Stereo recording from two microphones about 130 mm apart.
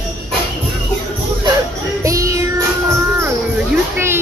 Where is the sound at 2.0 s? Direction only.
25° right (ahead or behind).